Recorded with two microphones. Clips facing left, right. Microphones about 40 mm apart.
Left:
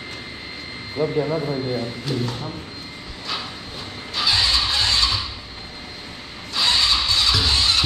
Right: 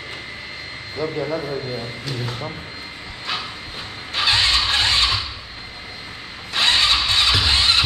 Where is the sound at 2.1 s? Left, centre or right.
Centre.